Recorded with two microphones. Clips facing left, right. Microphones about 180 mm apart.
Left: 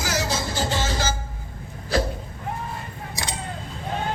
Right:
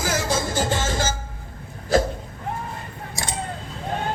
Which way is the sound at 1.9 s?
45° right (ahead or behind).